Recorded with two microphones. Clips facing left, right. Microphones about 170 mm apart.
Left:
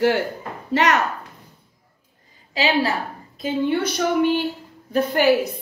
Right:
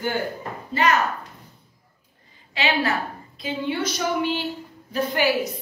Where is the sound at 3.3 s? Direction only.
50° left (ahead or behind).